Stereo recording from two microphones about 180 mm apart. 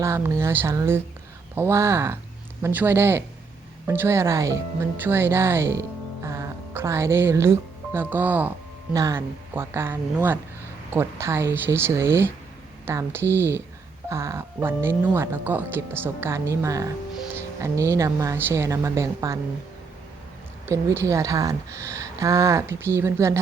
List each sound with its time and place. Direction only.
0.0 s speech: 15° right (ahead or behind)
20.7 s speech: 15° right (ahead or behind)